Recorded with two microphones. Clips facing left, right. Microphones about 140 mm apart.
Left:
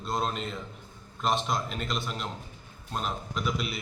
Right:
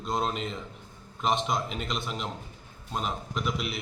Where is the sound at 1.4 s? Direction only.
5° right (ahead or behind).